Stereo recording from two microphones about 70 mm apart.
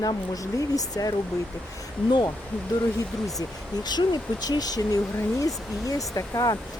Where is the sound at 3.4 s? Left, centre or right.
Left.